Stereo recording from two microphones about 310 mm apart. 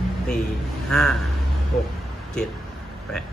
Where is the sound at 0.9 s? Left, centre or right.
Centre.